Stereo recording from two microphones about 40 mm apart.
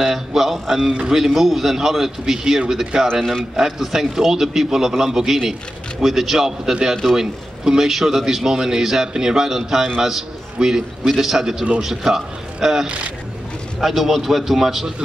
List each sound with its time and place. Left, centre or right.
0.0 s a man's voice: centre
6.7 s a man's voice: right
12.8 s speech: right
13.7 s a man's voice: centre